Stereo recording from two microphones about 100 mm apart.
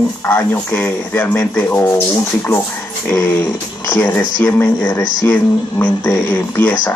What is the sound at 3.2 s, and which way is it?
Speech, 20° left (ahead or behind).